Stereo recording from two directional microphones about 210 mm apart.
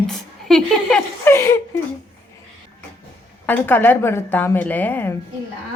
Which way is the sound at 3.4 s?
10° left (ahead or behind).